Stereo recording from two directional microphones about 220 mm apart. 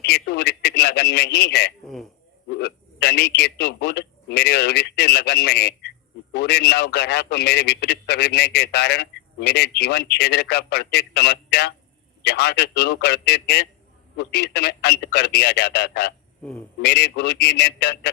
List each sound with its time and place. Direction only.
0.0 s a man's voice: 50° left (ahead or behind)
16.4 s speech: 5° left (ahead or behind)
16.8 s a man's voice: 50° left (ahead or behind)